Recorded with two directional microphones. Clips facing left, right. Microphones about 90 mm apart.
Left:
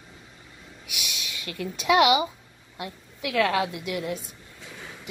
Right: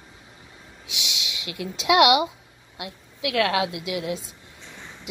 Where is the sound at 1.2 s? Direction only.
15° right (ahead or behind).